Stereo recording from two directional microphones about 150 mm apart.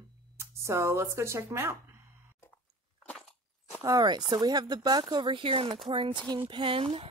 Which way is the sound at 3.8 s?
25° right (ahead or behind).